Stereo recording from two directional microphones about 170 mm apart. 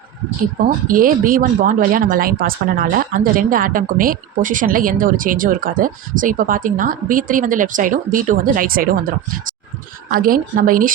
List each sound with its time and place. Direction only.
0.6 s speech: 55° right (ahead or behind)